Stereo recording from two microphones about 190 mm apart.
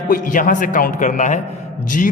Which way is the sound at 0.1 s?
45° left (ahead or behind).